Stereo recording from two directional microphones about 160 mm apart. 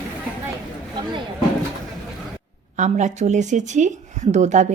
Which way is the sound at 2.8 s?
45° right (ahead or behind).